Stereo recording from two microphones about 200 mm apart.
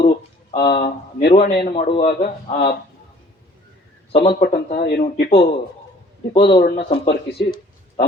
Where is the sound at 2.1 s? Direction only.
45° left (ahead or behind).